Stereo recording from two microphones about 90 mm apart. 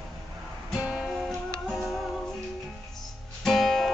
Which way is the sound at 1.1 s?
Centre (ahead or behind).